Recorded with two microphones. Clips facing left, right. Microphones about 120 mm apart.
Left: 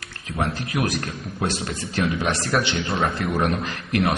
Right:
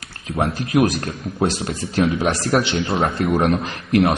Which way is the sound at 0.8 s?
30° right (ahead or behind).